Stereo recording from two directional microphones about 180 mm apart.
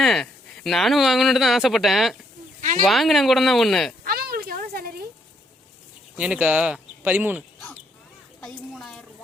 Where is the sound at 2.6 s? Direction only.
45° right (ahead or behind).